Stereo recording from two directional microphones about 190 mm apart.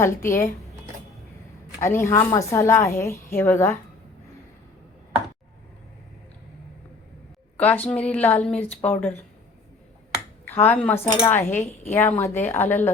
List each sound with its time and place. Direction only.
0.0 s a woman's voice: 15° left (ahead or behind)
1.8 s a woman's voice: 15° left (ahead or behind)
7.5 s a woman's voice: 10° left (ahead or behind)
10.4 s speech: 10° left (ahead or behind)
11.4 s speech: 35° left (ahead or behind)
11.9 s a woman's voice: 10° left (ahead or behind)